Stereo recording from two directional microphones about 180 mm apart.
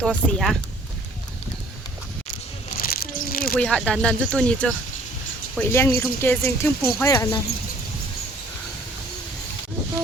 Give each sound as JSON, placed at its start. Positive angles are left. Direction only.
{"t": 0.0, "sound": "speech", "side_deg": 5}
{"t": 2.7, "sound": "a sound", "side_deg": 55}
{"t": 3.6, "sound": "speech", "side_deg": 5}